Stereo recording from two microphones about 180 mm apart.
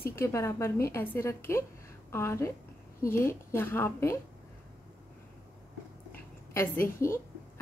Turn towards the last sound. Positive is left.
turn(degrees=15)  # may be behind; listen again after turning